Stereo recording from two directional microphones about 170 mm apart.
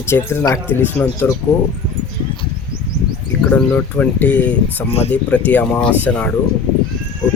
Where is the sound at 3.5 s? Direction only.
10° left (ahead or behind).